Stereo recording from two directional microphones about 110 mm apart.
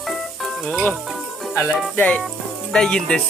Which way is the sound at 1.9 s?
10° left (ahead or behind).